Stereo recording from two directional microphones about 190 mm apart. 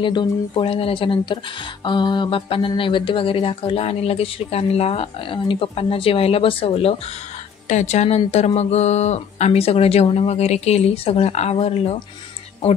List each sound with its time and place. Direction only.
0.0 s speech: 25° left (ahead or behind)